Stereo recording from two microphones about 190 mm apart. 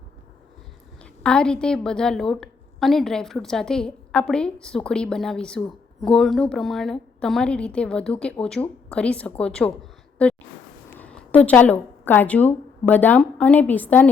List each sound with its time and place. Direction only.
1.2 s a woman's voice: 5° left (ahead or behind)
10.2 s a sound: 5° left (ahead or behind)
10.9 s a woman's voice: 5° left (ahead or behind)